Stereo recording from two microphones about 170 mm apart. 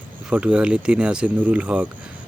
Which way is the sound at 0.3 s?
5° right (ahead or behind).